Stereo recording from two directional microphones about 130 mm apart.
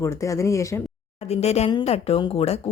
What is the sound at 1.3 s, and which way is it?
Speech, 55° left (ahead or behind).